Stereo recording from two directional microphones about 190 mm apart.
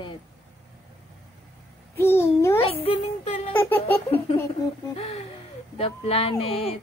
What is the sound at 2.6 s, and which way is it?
Speech, 30° left (ahead or behind).